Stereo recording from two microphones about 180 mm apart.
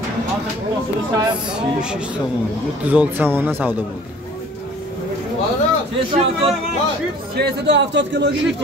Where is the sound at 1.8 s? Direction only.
5° right (ahead or behind).